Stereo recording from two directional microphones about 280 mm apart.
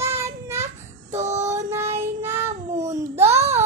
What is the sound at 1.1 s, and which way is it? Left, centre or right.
Child singing, right.